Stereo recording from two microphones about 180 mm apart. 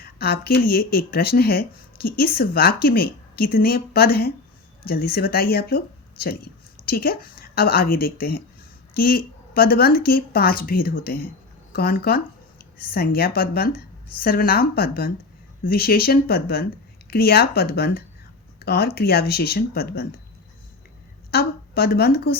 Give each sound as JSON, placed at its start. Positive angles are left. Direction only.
{"t": 0.0, "sound": "speech", "side_deg": 55}
{"t": 21.2, "sound": "a woman's voice", "side_deg": 60}